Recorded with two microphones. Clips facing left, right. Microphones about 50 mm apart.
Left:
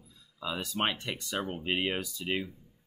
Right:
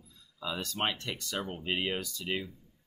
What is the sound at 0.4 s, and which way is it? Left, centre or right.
Speech, centre.